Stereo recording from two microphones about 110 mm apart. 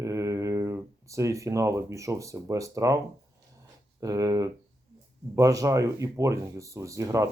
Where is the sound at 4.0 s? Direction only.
30° right (ahead or behind).